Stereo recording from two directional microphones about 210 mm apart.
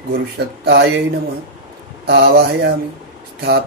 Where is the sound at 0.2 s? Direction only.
50° right (ahead or behind).